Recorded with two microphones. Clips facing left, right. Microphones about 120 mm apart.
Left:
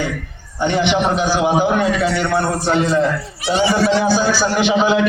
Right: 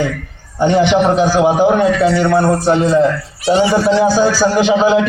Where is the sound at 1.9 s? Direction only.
15° left (ahead or behind).